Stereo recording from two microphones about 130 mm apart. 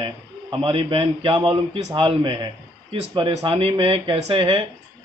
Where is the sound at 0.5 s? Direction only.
40° right (ahead or behind).